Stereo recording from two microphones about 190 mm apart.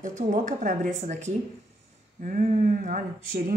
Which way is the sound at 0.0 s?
40° right (ahead or behind).